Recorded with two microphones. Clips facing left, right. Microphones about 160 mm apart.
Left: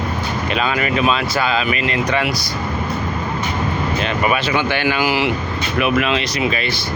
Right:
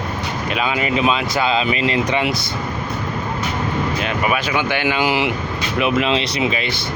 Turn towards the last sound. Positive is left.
turn(degrees=-20)  # may be behind; listen again after turning